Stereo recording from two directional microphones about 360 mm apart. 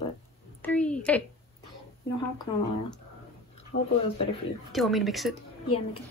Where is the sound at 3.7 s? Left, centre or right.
Left.